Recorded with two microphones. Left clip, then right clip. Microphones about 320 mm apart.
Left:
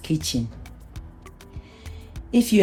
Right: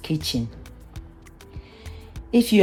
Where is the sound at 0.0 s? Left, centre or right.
Right.